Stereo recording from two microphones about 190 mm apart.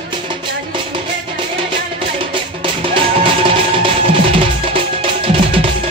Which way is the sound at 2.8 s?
25° right (ahead or behind).